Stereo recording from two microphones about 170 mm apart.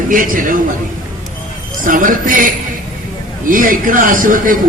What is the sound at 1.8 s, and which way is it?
Speech, 55° right (ahead or behind).